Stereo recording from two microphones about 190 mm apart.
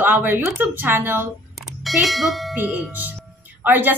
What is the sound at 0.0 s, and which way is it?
A woman's voice, 10° right (ahead or behind).